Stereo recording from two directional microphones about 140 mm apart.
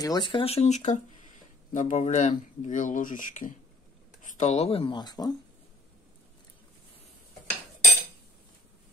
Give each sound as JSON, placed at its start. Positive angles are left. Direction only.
{"t": 0.0, "sound": "speech", "side_deg": 30}